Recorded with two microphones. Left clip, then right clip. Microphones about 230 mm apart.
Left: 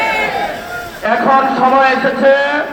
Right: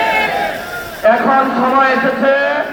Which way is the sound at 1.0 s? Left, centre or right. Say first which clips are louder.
Even; left.